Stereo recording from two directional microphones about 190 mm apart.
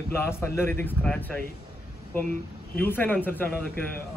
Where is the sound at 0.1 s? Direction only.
15° left (ahead or behind).